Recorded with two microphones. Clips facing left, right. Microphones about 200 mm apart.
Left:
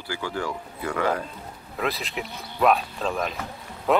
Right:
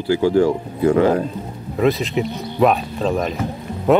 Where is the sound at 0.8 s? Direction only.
25° right (ahead or behind).